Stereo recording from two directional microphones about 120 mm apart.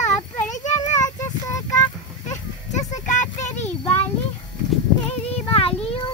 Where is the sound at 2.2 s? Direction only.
80° left.